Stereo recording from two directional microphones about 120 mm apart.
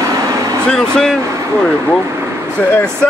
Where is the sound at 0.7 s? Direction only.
5° left (ahead or behind).